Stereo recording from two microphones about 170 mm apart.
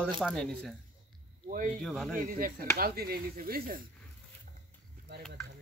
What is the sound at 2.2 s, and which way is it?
Speech, 55° right (ahead or behind).